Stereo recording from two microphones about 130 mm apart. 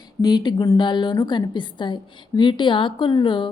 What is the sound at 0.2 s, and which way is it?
A woman's voice, 30° left (ahead or behind).